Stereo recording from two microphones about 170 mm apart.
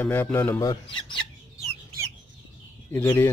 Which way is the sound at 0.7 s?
25° left (ahead or behind).